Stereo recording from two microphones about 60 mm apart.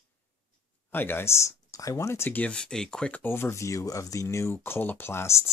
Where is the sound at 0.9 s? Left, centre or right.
Left.